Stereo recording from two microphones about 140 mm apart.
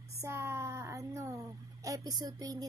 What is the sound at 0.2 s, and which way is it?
Speech, 20° right (ahead or behind).